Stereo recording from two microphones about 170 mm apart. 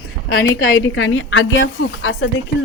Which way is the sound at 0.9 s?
90° left.